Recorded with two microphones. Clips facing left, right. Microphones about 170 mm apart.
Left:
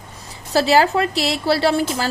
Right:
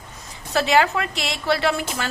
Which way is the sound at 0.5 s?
35° left (ahead or behind).